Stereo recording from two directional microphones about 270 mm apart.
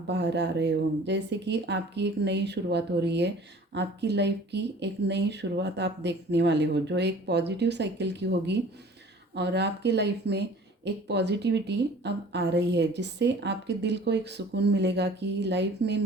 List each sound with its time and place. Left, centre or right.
0.1 s a woman's voice: right